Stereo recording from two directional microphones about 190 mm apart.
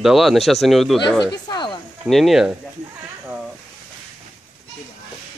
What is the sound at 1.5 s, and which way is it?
Snake, 25° left (ahead or behind).